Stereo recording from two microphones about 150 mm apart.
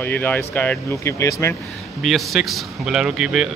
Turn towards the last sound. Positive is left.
turn(degrees=-5)  # may be behind; listen again after turning